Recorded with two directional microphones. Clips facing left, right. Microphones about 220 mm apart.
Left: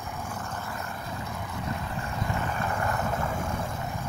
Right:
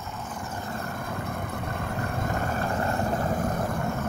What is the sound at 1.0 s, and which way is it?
Vehicle, 55° right (ahead or behind).